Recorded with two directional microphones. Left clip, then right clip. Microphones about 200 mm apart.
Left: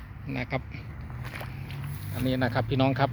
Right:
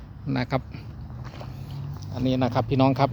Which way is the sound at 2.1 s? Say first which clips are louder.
Right 3 dB; 10° right (ahead or behind).